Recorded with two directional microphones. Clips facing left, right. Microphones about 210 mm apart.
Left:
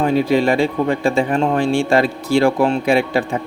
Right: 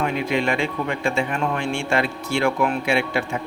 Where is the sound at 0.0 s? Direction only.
35° left (ahead or behind).